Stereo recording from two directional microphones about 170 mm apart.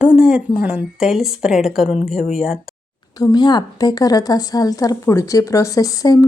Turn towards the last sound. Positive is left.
turn(degrees=20)  # may be behind; listen again after turning